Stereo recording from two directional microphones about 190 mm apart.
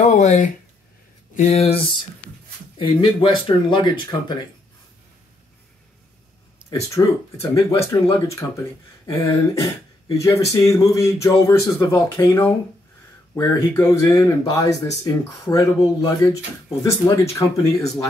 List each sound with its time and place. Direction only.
0.0 s speech: 35° left (ahead or behind)
7.0 s speech: 15° left (ahead or behind)